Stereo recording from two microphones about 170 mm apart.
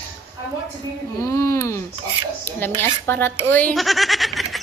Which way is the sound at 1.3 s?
15° left (ahead or behind).